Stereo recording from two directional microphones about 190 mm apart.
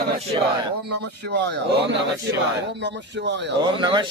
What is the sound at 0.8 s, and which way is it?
A man's voice, 65° right (ahead or behind).